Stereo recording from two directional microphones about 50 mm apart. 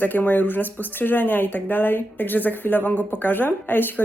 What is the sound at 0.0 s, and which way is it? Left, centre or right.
Speech, left.